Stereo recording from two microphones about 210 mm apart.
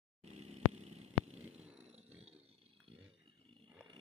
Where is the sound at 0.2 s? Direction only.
30° right (ahead or behind).